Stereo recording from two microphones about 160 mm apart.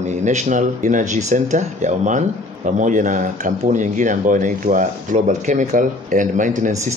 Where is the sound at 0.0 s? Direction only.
45° right (ahead or behind).